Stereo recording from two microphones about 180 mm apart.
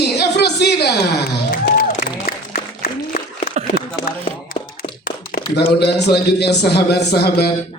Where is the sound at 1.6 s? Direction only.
50° left (ahead or behind).